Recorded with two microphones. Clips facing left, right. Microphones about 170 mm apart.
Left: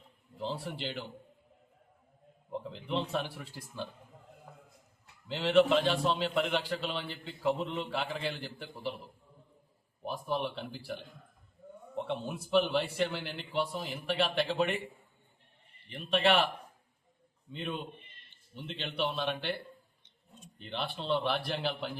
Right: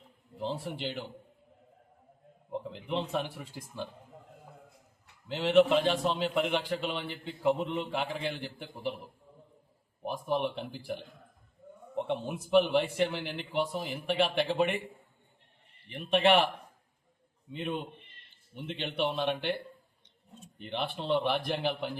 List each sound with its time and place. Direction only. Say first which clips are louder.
0.6 s a man's voice: right 2 dB; 15° right (ahead or behind)
2.5 s a man's voice: right 1 dB; 15° right (ahead or behind)
5.3 s a man's voice: right 2 dB; 10° right (ahead or behind)
10.0 s a man's voice: right 3 dB; 15° right (ahead or behind)
11.9 s a man's voice: right 3 dB; 15° right (ahead or behind)
16.0 s a man's voice: right 3 dB; 15° right (ahead or behind)
18.5 s a man's voice: right 3 dB; 15° right (ahead or behind)
20.9 s a man's voice: right 2 dB; 15° right (ahead or behind)